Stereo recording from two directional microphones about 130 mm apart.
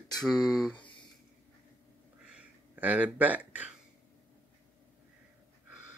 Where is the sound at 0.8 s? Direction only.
40° left (ahead or behind).